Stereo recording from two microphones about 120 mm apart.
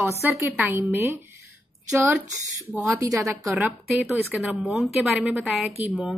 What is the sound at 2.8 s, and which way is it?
Speech, 25° right (ahead or behind).